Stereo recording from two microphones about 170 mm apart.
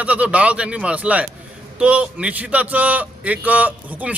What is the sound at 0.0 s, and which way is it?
A man's voice, 10° right (ahead or behind).